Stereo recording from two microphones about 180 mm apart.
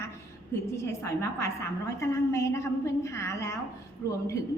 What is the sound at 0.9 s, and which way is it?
A woman's voice, 15° left (ahead or behind).